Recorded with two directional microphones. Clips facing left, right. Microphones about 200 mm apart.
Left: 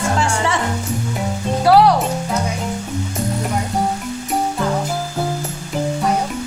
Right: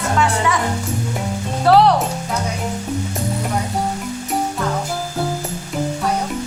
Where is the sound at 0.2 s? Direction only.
30° left (ahead or behind).